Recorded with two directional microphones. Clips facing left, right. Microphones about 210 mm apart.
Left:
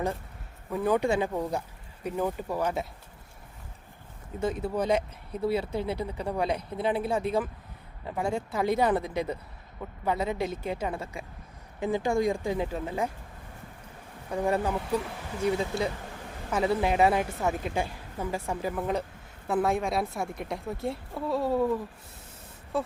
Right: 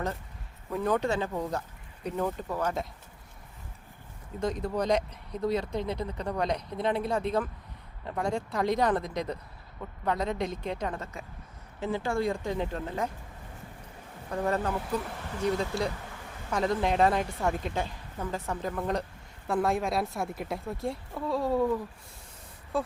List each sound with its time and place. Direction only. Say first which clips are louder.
0.7 s speech: left 2 dB; 5° left (ahead or behind)
4.4 s speech: left 1 dB; 5° left (ahead or behind)
14.3 s a woman's voice: left 2 dB; 10° left (ahead or behind)